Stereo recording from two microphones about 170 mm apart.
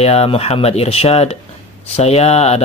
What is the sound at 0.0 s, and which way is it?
Speech, 35° left (ahead or behind).